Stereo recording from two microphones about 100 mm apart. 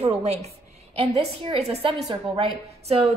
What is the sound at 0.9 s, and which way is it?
A woman's voice, 75° right (ahead or behind).